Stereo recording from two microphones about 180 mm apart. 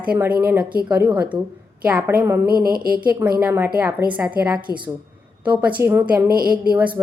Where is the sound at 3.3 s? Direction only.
10° right (ahead or behind).